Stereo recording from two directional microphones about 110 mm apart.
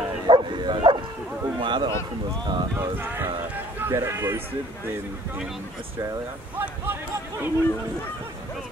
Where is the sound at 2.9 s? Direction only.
20° right (ahead or behind).